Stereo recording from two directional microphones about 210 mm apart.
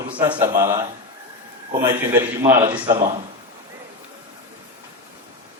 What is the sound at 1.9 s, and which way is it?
Speech, 10° right (ahead or behind).